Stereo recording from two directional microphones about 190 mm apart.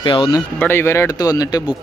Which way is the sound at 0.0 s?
25° left (ahead or behind).